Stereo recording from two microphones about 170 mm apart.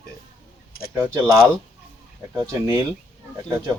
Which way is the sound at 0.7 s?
60° left (ahead or behind).